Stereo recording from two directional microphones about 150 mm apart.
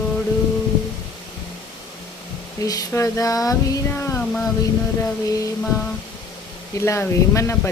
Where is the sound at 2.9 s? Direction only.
20° left (ahead or behind).